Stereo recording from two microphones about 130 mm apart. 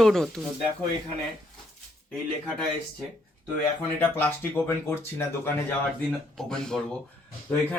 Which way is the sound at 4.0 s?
15° left (ahead or behind).